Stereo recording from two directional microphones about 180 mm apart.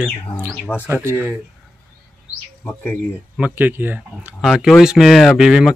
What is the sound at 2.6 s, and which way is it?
Speech, 10° left (ahead or behind).